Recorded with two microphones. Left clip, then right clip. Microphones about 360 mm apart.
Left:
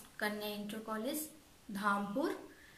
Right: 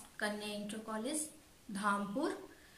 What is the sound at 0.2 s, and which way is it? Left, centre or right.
A woman's voice, centre.